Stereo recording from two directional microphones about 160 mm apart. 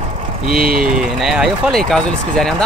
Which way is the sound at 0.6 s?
65° right (ahead or behind).